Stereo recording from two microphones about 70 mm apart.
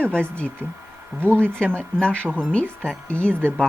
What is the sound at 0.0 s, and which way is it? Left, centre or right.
Speech, centre.